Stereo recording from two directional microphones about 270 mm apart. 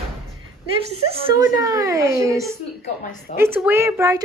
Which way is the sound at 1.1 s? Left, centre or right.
Centre.